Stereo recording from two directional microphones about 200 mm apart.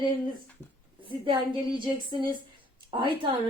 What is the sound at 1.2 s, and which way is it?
A woman's voice, 25° right (ahead or behind).